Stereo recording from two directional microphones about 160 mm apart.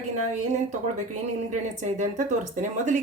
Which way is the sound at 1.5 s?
50° right (ahead or behind).